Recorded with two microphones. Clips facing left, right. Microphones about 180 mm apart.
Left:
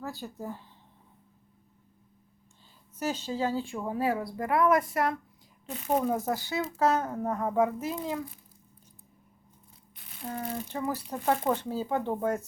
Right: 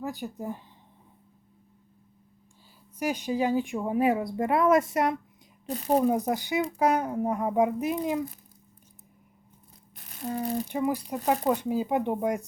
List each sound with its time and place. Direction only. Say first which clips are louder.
0.0 s speech: right 4 dB; 15° right (ahead or behind)
3.0 s speech: right 3 dB; 15° right (ahead or behind)
5.6 s speech: right 4 dB; 35° right (ahead or behind)
6.0 s speech: right 4 dB; 15° right (ahead or behind)
9.9 s a sound: right 5 dB; 45° right (ahead or behind)
10.7 s speech: right 5 dB; 15° right (ahead or behind)